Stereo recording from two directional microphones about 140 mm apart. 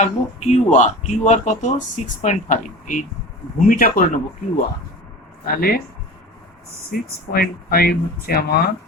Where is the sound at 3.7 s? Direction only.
85° left.